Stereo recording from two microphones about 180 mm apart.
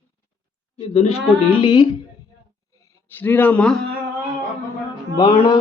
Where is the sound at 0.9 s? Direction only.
30° left (ahead or behind).